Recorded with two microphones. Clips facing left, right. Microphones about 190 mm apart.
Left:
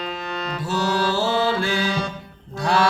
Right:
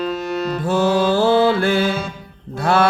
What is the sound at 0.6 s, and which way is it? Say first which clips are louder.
Music: right 6 dB; 55° right (ahead or behind).